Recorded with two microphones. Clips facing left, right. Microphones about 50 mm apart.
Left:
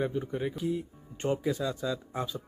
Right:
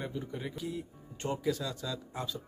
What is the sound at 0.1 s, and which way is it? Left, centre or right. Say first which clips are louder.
Speech: left 6 dB; left.